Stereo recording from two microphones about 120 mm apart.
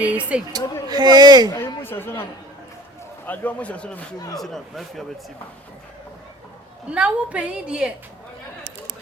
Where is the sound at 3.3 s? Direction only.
10° left (ahead or behind).